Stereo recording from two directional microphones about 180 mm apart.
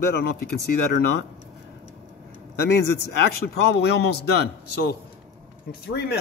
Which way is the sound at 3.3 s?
65° left (ahead or behind).